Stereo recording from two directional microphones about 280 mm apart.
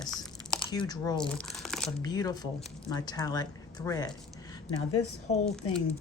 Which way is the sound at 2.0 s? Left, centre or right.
Centre.